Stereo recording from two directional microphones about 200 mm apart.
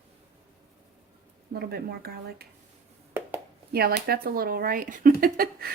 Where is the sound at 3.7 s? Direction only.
50° right (ahead or behind).